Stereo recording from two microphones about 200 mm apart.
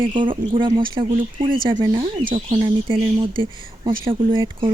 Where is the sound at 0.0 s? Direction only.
25° right (ahead or behind).